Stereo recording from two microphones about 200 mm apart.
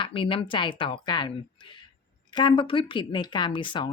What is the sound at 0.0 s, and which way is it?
Speech, 25° left (ahead or behind).